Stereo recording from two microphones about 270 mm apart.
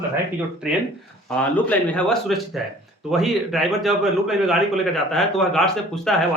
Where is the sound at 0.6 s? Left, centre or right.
Centre.